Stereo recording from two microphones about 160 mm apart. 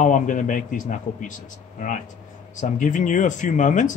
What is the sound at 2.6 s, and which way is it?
A man's voice, 50° left (ahead or behind).